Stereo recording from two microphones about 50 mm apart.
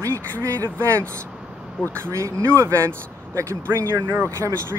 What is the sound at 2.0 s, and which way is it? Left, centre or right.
Speech, right.